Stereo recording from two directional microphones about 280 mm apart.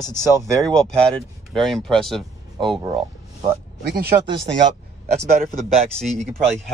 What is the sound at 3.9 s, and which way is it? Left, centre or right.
Speech, right.